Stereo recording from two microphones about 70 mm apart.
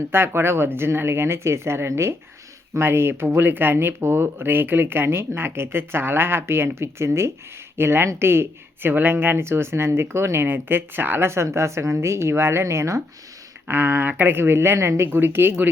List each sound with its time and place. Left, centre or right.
0.1 s speech: right
11.3 s speech: right
13.7 s speech: right